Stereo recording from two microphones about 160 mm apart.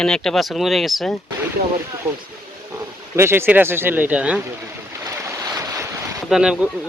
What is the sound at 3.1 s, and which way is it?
Speech, 15° right (ahead or behind).